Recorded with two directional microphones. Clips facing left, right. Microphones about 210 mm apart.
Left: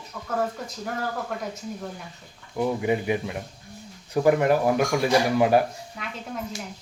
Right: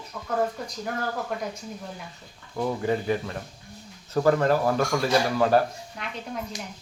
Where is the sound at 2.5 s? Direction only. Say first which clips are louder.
Left 2 dB; 15° left (ahead or behind).